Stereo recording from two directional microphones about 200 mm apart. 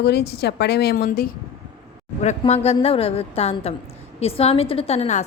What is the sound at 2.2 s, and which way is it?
A woman's voice, 30° left (ahead or behind).